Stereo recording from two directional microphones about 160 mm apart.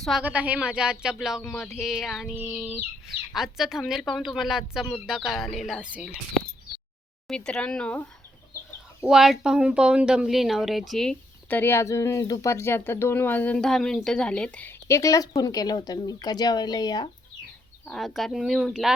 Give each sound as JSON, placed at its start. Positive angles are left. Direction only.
{"t": 0.0, "sound": "speech", "side_deg": -5}
{"t": 7.3, "sound": "speech", "side_deg": 5}
{"t": 9.0, "sound": "speech", "side_deg": -5}
{"t": 17.8, "sound": "speech", "side_deg": 0}